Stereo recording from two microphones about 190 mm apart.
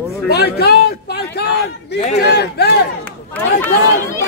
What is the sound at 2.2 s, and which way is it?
Speech, 60° left (ahead or behind).